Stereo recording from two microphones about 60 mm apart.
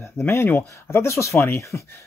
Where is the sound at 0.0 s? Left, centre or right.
Left.